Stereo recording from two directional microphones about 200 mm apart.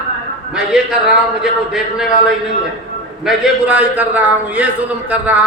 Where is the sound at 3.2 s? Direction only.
5° right (ahead or behind).